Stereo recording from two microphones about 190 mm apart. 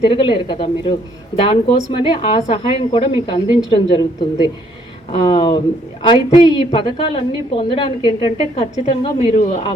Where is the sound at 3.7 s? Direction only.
25° left (ahead or behind).